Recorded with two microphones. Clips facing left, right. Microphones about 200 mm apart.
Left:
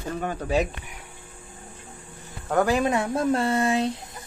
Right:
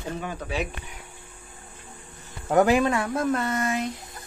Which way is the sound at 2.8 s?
20° left (ahead or behind).